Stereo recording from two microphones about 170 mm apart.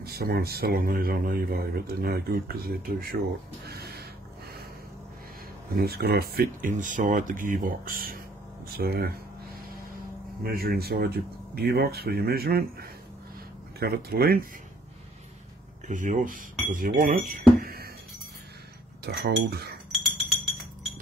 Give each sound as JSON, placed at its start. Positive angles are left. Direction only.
{"t": 0.0, "sound": "speech", "side_deg": -65}
{"t": 3.6, "sound": "a sound", "side_deg": -65}
{"t": 5.8, "sound": "speech", "side_deg": -70}
{"t": 10.4, "sound": "speech", "side_deg": -65}
{"t": 13.7, "sound": "speech", "side_deg": -65}
{"t": 15.9, "sound": "speech", "side_deg": -50}
{"t": 19.0, "sound": "speech", "side_deg": -70}
{"t": 19.9, "sound": "chink", "side_deg": 0}